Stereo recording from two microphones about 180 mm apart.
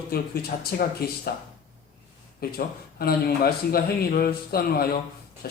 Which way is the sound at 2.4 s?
60° left (ahead or behind).